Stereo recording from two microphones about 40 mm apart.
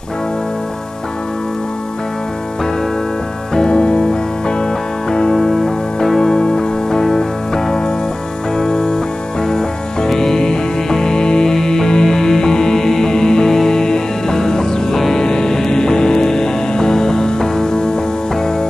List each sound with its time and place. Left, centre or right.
3.5 s music: left
5.3 s music: centre